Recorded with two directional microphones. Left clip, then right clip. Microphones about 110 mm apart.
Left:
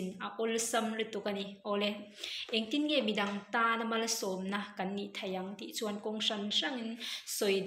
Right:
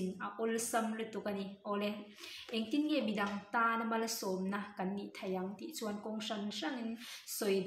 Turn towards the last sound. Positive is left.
turn(degrees=-30)  # may be behind; listen again after turning